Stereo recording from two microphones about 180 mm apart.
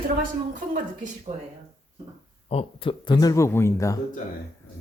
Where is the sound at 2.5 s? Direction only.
30° left (ahead or behind).